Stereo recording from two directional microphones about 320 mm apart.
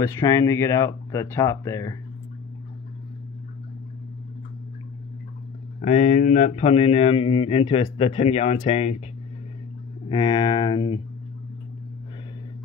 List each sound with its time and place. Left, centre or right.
0.0 s speech: centre
5.8 s speech: left
10.0 s speech: centre